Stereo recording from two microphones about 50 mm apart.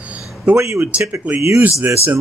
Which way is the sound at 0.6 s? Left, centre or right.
Right.